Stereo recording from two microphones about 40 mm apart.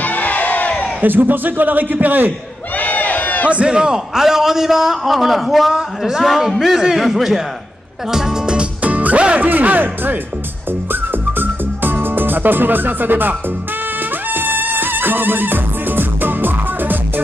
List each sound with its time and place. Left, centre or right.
0.0 s crowd: left
1.0 s a man's voice: right
2.8 s a sound: left
3.4 s a man's voice: right
8.8 s music: right
9.4 s a man's voice: right
10.9 s music: right